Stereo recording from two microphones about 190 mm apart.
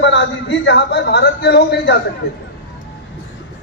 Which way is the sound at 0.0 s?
65° left (ahead or behind).